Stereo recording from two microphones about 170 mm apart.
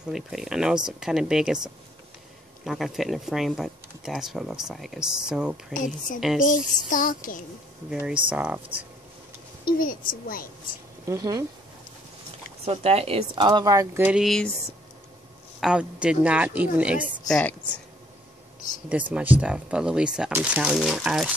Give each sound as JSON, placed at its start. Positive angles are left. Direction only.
{"t": 0.1, "sound": "speech", "side_deg": 0}
{"t": 6.4, "sound": "speech", "side_deg": 50}
{"t": 7.9, "sound": "a woman's voice", "side_deg": -5}
{"t": 9.8, "sound": "a woman's voice", "side_deg": 55}
{"t": 11.1, "sound": "speech", "side_deg": -20}
{"t": 12.6, "sound": "speech", "side_deg": -35}
{"t": 13.5, "sound": "speech", "side_deg": -20}
{"t": 14.2, "sound": "speech", "side_deg": 0}
{"t": 15.6, "sound": "a woman's voice", "side_deg": -5}
{"t": 17.3, "sound": "a woman's voice", "side_deg": 5}
{"t": 18.9, "sound": "speech", "side_deg": -10}